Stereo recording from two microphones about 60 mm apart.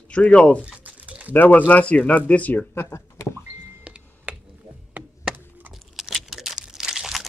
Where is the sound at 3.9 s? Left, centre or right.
Centre.